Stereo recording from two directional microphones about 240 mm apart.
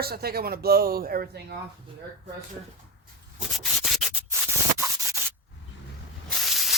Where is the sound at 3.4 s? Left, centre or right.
Centre.